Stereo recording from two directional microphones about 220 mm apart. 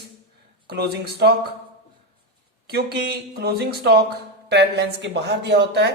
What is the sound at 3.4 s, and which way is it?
Speech, 45° right (ahead or behind).